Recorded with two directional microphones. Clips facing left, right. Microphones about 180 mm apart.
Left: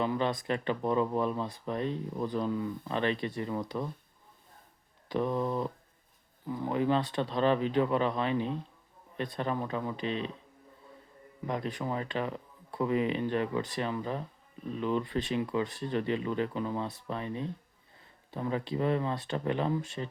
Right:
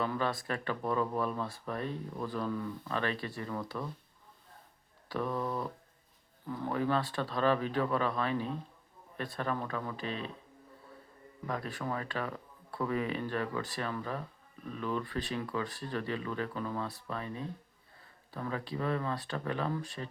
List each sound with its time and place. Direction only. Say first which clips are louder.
0.0 s speech: left 3 dB; 20° left (ahead or behind)
5.0 s speech: left 4 dB; 20° left (ahead or behind)
11.4 s speech: left 3 dB; 20° left (ahead or behind)